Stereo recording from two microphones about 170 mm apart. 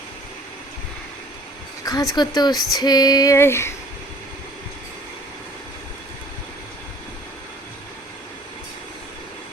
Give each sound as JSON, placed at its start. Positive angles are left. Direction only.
{"t": 1.8, "sound": "female singing", "side_deg": 20}